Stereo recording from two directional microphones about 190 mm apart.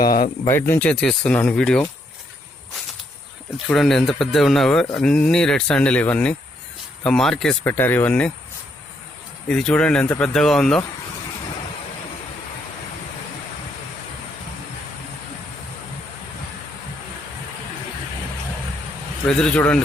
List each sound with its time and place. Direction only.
0.0 s speech: 50° left (ahead or behind)
0.4 s speech: 15° left (ahead or behind)
3.7 s speech: 5° left (ahead or behind)
9.5 s speech: 5° left (ahead or behind)
19.4 s speech: 5° left (ahead or behind)